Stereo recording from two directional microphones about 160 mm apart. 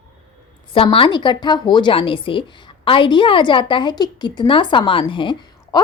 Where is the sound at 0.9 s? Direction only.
30° left (ahead or behind).